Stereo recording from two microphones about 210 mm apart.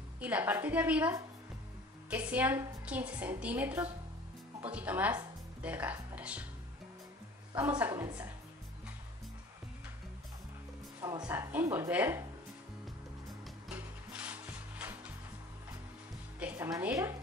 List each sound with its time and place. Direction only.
0.2 s a woman's voice: 10° right (ahead or behind)
7.5 s a woman's voice: 5° right (ahead or behind)
7.9 s a woman's voice: 20° right (ahead or behind)
11.0 s a woman's voice: 20° right (ahead or behind)
13.7 s music: 5° right (ahead or behind)
16.3 s music: 5° right (ahead or behind)
16.6 s a woman's voice: 15° right (ahead or behind)